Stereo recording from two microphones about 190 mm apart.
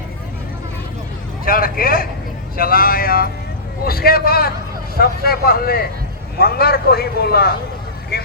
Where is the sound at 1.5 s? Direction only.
50° left (ahead or behind).